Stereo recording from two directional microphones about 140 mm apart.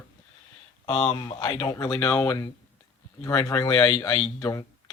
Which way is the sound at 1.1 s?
30° left (ahead or behind).